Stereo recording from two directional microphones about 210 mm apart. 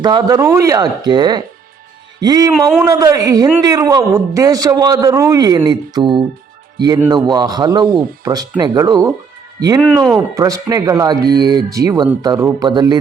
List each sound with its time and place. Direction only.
0.0 s a man's voice: 20° right (ahead or behind)
2.5 s a man's voice: centre (ahead or behind)
2.8 s a man's voice: 15° right (ahead or behind)
9.8 s a man's voice: 5° right (ahead or behind)
10.2 s a man's voice: 15° right (ahead or behind)